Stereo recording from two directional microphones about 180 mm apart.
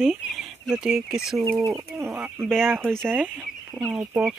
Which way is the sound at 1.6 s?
15° right (ahead or behind).